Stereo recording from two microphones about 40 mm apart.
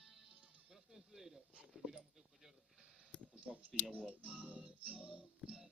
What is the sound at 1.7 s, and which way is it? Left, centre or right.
Dog, centre.